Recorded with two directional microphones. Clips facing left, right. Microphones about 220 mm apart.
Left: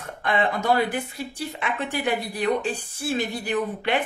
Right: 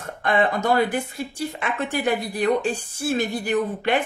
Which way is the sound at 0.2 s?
45° right (ahead or behind).